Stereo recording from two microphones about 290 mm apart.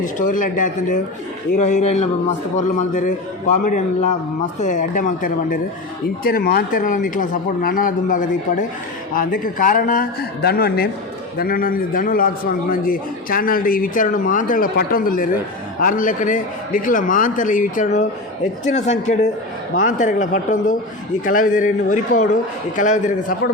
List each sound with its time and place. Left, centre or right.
0.0 s a man's voice: left